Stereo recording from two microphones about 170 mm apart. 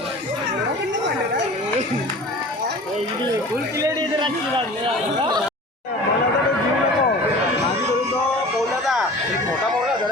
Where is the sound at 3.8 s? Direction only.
25° right (ahead or behind).